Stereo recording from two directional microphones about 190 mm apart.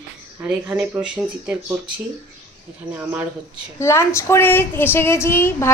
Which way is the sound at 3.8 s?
15° left (ahead or behind).